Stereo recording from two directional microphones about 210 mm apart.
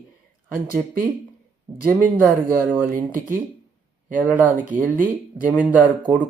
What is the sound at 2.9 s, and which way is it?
Speech, 40° right (ahead or behind).